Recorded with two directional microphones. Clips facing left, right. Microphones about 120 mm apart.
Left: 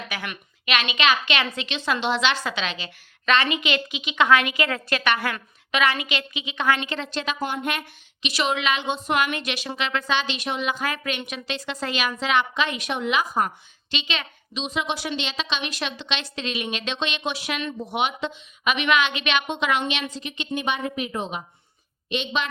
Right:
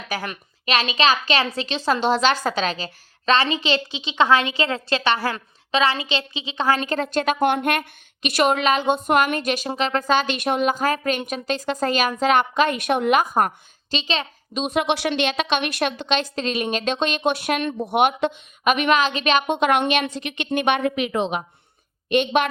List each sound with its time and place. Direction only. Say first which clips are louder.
0.1 s a woman's voice: right 5 dB; 35° right (ahead or behind); by 13.5 s 50° right (ahead or behind)
13.9 s a woman's voice: right 5 dB; 35° right (ahead or behind)
14.6 s a woman's voice: right 6 dB; 55° right (ahead or behind); by 21.4 s 80° right
22.1 s a woman's voice: right 8 dB; 55° right (ahead or behind)